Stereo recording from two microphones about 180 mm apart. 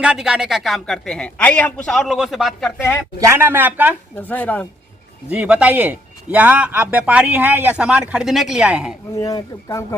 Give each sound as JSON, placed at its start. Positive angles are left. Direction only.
{"t": 0.0, "sound": "a man's voice", "side_deg": -5}
{"t": 3.2, "sound": "speech", "side_deg": -15}
{"t": 4.1, "sound": "speech", "side_deg": 10}
{"t": 5.3, "sound": "speech", "side_deg": -5}
{"t": 9.1, "sound": "speech", "side_deg": 20}